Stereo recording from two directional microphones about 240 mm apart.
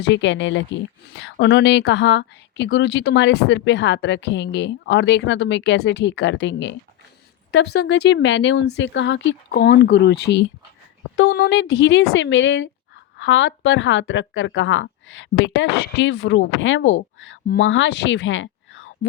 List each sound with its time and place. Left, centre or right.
0.0 s speech: left